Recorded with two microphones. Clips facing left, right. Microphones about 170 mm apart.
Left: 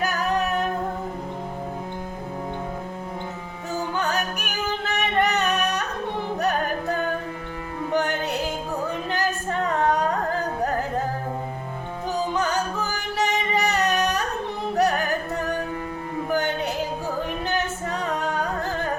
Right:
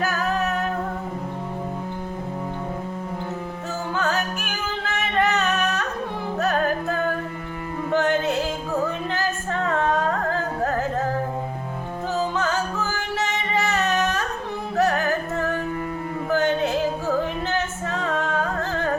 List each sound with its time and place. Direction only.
0.0 s music: 15° left (ahead or behind)
3.9 s music: 15° left (ahead or behind)
12.4 s music: 15° left (ahead or behind)